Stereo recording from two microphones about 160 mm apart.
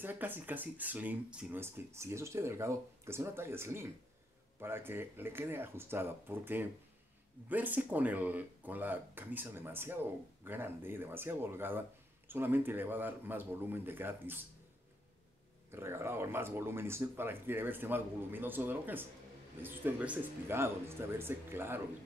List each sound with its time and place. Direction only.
0.0 s speech: 10° right (ahead or behind)
15.7 s speech: 15° right (ahead or behind)